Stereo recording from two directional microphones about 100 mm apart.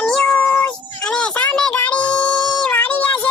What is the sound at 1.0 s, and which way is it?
Child singing, 10° left (ahead or behind).